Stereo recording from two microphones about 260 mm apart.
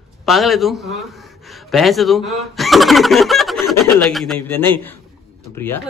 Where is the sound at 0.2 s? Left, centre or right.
Centre.